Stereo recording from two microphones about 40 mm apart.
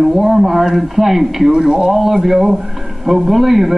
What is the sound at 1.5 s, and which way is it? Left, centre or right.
Speech, centre.